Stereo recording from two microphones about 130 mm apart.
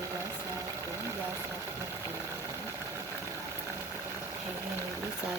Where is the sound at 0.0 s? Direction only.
20° right (ahead or behind).